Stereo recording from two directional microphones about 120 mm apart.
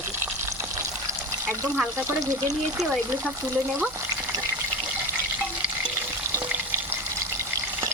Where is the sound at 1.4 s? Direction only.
20° right (ahead or behind).